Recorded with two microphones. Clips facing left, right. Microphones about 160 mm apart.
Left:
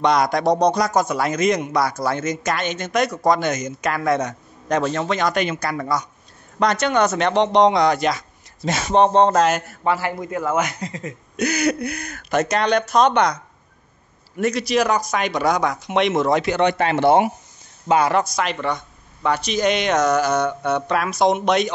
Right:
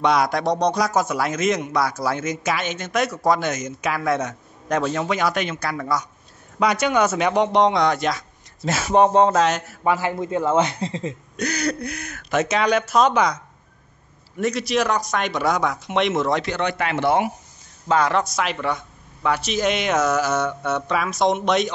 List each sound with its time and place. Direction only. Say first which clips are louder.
0.0 s a man's voice: left 2 dB; 5° right (ahead or behind)
9.8 s a man's voice: right 1 dB; 15° right (ahead or behind)
11.3 s a man's voice: left 5 dB; 5° left (ahead or behind)
16.7 s speech: left 3 dB; 30° left (ahead or behind)
17.8 s a man's voice: left 2 dB; 10° left (ahead or behind)